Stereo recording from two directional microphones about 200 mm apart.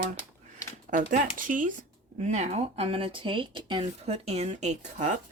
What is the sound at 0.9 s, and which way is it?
Speech, 40° right (ahead or behind).